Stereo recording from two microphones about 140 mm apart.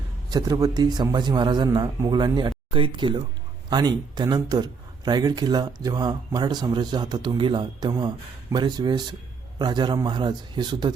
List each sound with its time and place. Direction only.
0.3 s a man's voice: 25° right (ahead or behind)